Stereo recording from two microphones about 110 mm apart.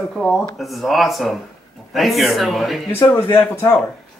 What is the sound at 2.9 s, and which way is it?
Speech, 20° left (ahead or behind).